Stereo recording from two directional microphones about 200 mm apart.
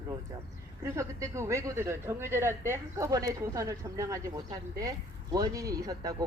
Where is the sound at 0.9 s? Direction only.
15° right (ahead or behind).